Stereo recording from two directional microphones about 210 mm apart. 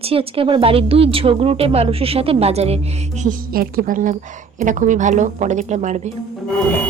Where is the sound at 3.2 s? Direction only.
40° right (ahead or behind).